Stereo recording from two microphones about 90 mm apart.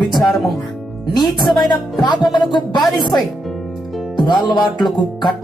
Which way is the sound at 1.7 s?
55° left (ahead or behind).